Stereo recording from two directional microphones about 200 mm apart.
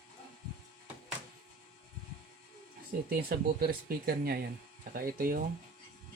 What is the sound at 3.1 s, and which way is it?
Speech, 50° right (ahead or behind).